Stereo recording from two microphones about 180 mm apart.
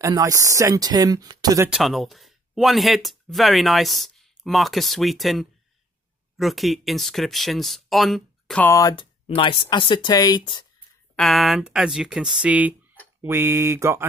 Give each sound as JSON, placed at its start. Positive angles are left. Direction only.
{"t": 0.0, "sound": "speech", "side_deg": -20}
{"t": 1.7, "sound": "speech", "side_deg": 0}
{"t": 8.6, "sound": "speech", "side_deg": 20}
{"t": 9.3, "sound": "speech", "side_deg": 30}
{"t": 11.1, "sound": "speech", "side_deg": 0}